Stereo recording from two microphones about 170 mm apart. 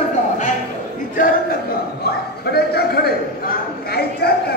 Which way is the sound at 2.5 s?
65° left (ahead or behind).